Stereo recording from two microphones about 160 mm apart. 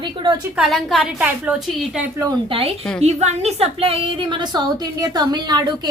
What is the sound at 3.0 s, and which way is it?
A woman's voice, 40° right (ahead or behind).